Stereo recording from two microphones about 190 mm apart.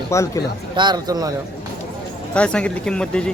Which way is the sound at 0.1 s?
15° left (ahead or behind).